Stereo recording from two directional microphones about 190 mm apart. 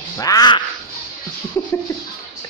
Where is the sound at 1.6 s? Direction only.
15° left (ahead or behind).